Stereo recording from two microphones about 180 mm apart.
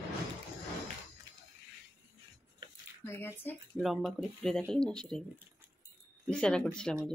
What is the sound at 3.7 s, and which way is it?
Speech, centre (ahead or behind).